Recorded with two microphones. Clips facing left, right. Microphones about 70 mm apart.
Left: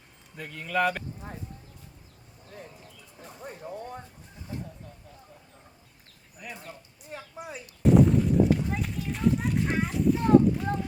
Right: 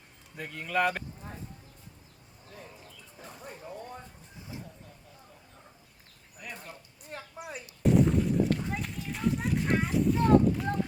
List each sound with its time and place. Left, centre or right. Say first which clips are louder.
0.3 s speech: left 1 dB; centre
3.4 s a sound: left 5 dB; left
6.4 s speech: left 1 dB; centre
7.1 s artillery fire: left 1 dB; centre